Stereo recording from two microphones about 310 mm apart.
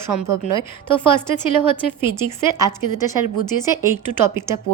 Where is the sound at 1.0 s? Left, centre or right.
Centre.